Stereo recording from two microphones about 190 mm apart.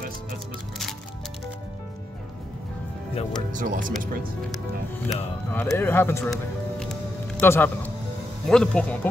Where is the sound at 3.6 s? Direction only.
45° right (ahead or behind).